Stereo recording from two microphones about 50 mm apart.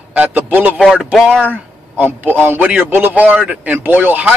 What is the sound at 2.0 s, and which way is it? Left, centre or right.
Speech, right.